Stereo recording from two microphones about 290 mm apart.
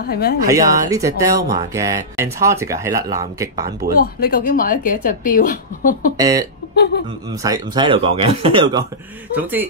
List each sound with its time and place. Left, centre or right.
0.0 s speech: left
0.5 s speech: centre
3.9 s speech: left
6.1 s speech: centre
9.3 s a man's voice: centre